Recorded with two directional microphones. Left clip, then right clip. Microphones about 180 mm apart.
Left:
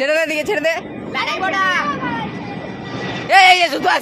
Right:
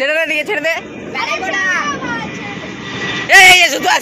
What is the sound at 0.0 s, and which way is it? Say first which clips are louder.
Speech: right 2 dB; 45° left (ahead or behind).